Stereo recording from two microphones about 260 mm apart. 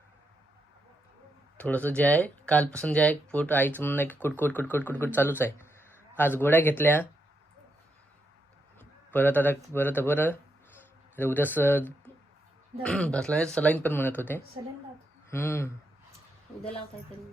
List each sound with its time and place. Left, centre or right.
1.5 s speech: centre
8.8 s a sound: centre
9.7 s speech: centre